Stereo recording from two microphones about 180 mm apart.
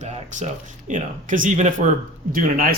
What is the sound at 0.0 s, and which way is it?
Speech, 40° right (ahead or behind).